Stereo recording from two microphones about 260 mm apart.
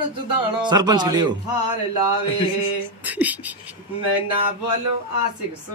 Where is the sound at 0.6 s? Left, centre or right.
Centre.